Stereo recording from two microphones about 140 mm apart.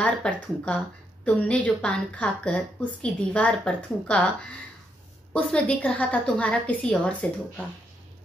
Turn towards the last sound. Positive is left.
turn(degrees=10)  # may be behind; listen again after turning